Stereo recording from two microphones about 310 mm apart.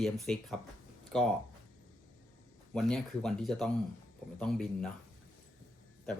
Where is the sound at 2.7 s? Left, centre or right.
Centre.